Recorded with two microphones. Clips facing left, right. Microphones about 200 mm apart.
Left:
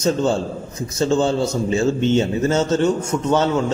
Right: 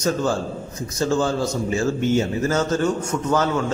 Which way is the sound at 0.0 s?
25° left (ahead or behind).